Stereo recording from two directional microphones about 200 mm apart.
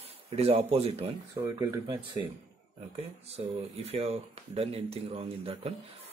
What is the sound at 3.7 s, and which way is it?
Speech, 30° right (ahead or behind).